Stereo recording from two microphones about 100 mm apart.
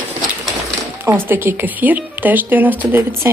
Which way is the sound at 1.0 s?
20° right (ahead or behind).